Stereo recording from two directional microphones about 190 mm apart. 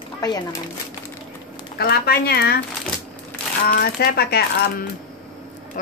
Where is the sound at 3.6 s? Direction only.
55° left (ahead or behind).